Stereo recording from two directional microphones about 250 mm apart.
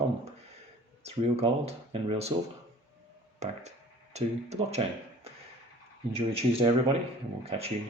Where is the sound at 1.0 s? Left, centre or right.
Right.